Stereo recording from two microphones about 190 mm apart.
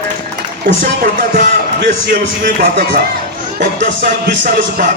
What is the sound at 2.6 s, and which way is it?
Speech, 55° right (ahead or behind).